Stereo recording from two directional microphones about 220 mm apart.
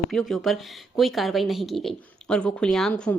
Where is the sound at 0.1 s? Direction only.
Centre (ahead or behind).